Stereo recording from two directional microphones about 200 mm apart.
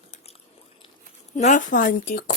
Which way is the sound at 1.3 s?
35° left (ahead or behind).